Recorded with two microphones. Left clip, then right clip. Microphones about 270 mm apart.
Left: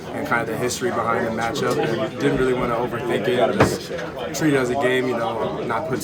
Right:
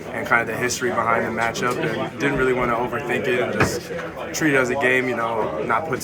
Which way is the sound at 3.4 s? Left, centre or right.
Left.